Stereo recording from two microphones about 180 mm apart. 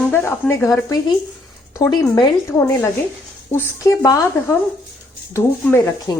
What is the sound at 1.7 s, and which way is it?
Speech, 20° left (ahead or behind).